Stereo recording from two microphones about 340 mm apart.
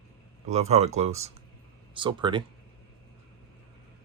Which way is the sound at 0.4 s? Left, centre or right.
Centre.